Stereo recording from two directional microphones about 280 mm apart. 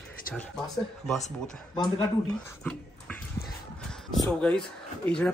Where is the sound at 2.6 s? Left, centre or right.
Centre.